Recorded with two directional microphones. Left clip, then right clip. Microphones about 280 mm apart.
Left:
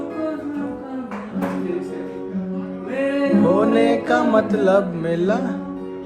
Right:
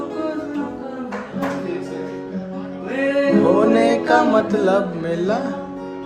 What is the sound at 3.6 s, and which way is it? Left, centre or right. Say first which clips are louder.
Music: right 2 dB; centre.